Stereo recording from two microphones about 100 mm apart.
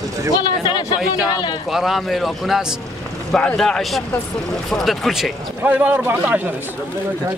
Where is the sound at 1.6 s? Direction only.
Centre (ahead or behind).